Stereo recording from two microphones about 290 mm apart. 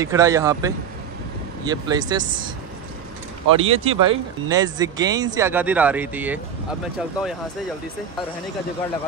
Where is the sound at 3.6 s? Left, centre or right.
Right.